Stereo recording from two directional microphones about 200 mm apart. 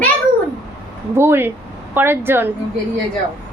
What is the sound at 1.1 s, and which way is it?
Speech, 10° right (ahead or behind).